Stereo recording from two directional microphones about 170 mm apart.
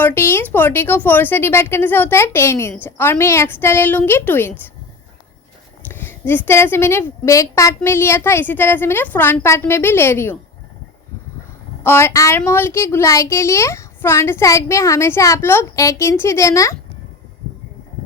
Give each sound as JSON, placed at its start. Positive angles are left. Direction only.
{"t": 0.0, "sound": "a woman's voice", "side_deg": 15}
{"t": 5.9, "sound": "a woman's voice", "side_deg": 15}
{"t": 11.8, "sound": "a woman's voice", "side_deg": 15}